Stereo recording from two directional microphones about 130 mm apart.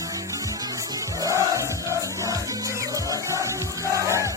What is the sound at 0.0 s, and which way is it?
Music, 25° right (ahead or behind).